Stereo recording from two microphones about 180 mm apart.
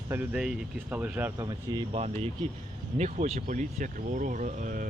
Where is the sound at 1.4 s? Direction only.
25° right (ahead or behind).